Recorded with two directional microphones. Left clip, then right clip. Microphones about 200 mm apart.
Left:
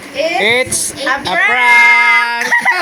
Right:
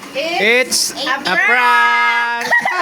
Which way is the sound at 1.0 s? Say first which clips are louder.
Left 3 dB; 20° right (ahead or behind).